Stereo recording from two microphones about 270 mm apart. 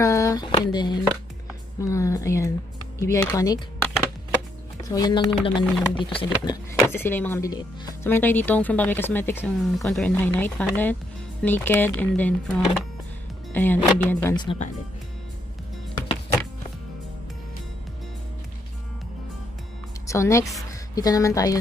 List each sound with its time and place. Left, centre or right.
0.0 s speech: centre
4.8 s speech: centre
20.1 s a woman's voice: centre